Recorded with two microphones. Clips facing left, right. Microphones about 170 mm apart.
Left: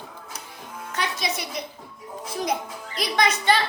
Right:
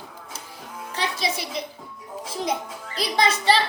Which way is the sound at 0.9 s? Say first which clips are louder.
Right 1 dB; 30° right (ahead or behind).